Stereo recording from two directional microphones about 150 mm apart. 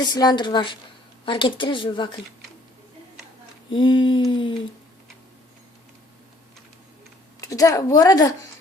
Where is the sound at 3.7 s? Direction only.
35° left (ahead or behind).